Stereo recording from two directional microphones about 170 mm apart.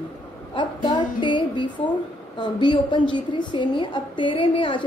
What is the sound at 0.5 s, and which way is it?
A woman's voice, 25° left (ahead or behind).